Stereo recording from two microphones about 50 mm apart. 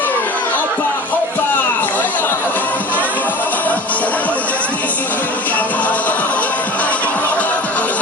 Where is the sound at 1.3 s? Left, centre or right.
Left.